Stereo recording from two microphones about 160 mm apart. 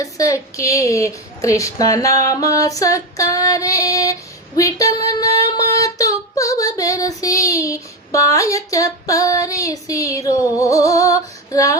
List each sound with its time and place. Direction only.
0.0 s a woman's voice: 20° left (ahead or behind)
7.2 s a sound: 20° left (ahead or behind)
11.5 s female singing: 20° left (ahead or behind)